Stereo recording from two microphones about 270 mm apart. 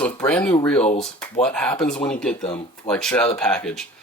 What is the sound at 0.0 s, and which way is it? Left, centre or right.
Speech, centre.